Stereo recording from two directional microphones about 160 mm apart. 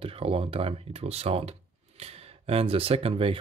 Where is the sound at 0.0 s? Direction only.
35° right (ahead or behind).